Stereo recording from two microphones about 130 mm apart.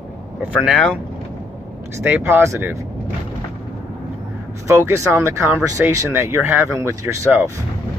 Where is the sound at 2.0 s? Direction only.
10° right (ahead or behind).